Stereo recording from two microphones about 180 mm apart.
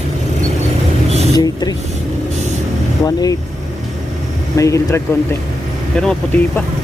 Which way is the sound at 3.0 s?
20° left (ahead or behind).